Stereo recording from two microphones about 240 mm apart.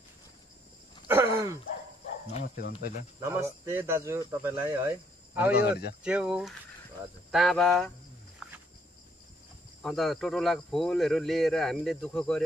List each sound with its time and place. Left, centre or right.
1.0 s groan: centre
2.4 s speech: left
3.2 s a man's voice: centre
5.5 s speech: left
6.0 s speech: centre
8.4 s wild animals: centre
9.8 s speech: centre